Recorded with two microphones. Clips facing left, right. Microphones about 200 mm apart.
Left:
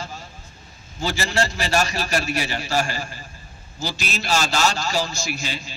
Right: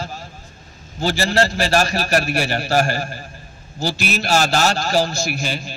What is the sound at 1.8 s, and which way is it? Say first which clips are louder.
A man's voice: right 5 dB; 65° right (ahead or behind).